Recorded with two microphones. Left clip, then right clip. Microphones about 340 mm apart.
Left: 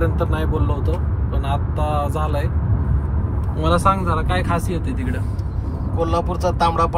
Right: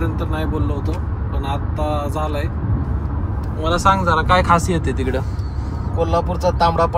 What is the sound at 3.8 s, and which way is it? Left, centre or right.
Speech, centre.